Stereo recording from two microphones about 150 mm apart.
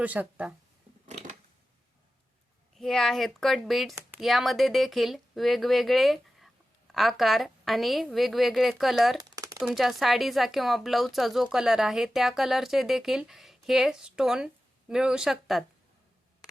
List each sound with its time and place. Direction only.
0.0 s speech: 10° right (ahead or behind)
2.7 s speech: centre (ahead or behind)
9.2 s a sound: 20° right (ahead or behind)
9.6 s speech: centre (ahead or behind)